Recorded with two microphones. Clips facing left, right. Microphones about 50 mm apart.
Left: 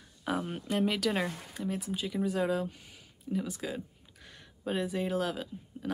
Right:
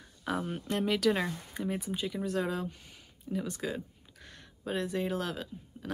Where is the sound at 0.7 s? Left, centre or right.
Centre.